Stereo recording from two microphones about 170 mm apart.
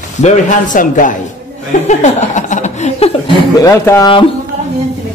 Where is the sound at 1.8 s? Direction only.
45° left (ahead or behind).